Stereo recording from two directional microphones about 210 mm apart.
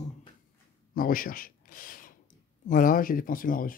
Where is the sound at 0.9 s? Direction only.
40° left (ahead or behind).